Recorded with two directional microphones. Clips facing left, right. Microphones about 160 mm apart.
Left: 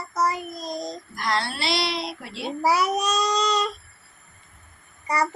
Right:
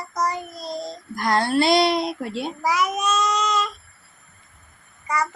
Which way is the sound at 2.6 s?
35° left (ahead or behind).